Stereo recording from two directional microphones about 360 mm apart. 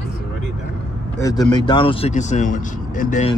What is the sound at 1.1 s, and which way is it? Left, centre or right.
Speech, centre.